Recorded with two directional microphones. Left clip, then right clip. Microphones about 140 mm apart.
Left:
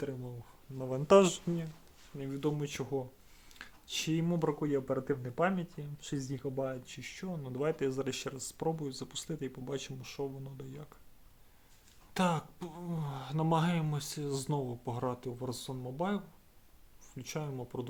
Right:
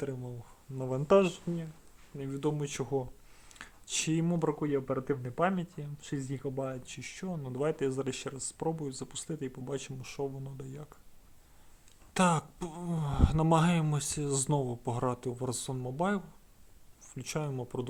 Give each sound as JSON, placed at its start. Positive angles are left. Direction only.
{"t": 0.8, "sound": "speech", "side_deg": -35}
{"t": 1.5, "sound": "speech", "side_deg": 5}
{"t": 2.1, "sound": "speech", "side_deg": -20}
{"t": 12.1, "sound": "speech", "side_deg": -40}